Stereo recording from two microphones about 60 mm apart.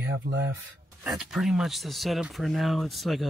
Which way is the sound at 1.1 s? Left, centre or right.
Centre.